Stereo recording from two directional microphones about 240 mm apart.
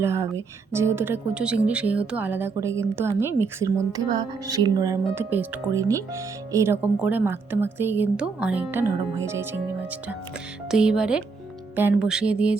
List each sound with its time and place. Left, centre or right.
0.0 s speech: centre
10.7 s speech: centre